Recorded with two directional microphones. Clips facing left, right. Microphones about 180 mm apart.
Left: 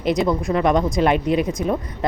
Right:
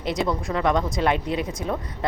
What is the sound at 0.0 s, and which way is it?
A woman's voice, 15° left (ahead or behind).